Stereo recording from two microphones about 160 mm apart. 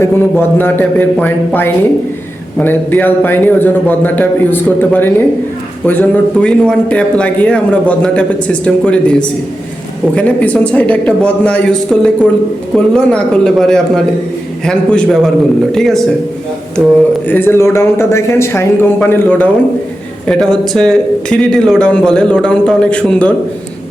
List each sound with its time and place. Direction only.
0.0 s a man's voice: 15° left (ahead or behind); by 16.9 s 5° right (ahead or behind)
17.2 s a man's voice: 15° left (ahead or behind)